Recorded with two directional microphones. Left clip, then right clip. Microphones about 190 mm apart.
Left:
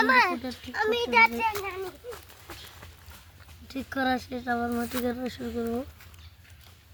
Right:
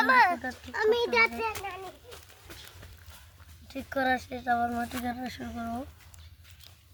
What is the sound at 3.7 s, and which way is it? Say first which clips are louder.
Speech: even; 20° right (ahead or behind).